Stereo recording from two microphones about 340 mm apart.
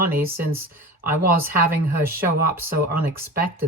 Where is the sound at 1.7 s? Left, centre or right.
Centre.